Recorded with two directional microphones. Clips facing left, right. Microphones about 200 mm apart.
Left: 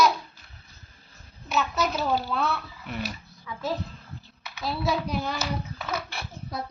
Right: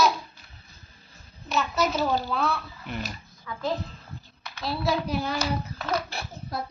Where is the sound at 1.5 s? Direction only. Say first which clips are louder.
Right 1 dB; centre (ahead or behind).